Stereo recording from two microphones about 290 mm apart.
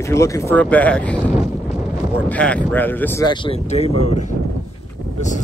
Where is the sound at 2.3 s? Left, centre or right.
Centre.